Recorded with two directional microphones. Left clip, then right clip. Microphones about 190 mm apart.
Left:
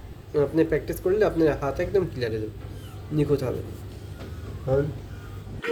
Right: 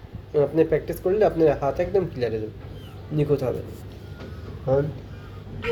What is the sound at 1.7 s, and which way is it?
Speech, 15° left (ahead or behind).